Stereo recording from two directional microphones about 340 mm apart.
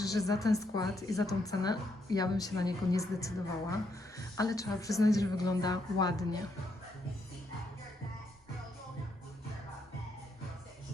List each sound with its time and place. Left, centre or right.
0.0 s a woman's voice: centre